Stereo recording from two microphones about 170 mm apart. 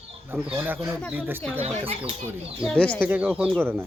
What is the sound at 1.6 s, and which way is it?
Speech, 35° right (ahead or behind).